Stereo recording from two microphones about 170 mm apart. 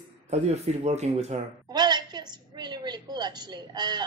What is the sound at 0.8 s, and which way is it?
Speech, 40° right (ahead or behind).